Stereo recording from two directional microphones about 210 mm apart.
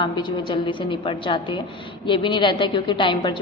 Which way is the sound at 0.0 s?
20° left (ahead or behind).